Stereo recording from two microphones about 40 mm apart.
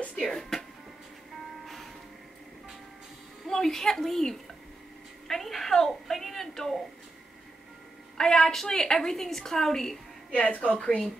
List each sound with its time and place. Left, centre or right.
0.2 s speech: centre
3.4 s a woman's voice: centre
8.2 s a woman's voice: centre
10.3 s a woman's voice: left